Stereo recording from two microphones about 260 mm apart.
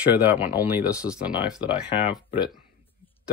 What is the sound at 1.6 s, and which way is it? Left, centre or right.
Speech, centre.